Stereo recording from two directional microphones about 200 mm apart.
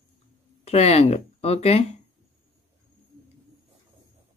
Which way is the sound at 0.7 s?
30° left (ahead or behind).